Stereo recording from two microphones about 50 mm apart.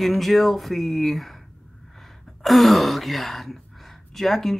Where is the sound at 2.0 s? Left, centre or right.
Centre.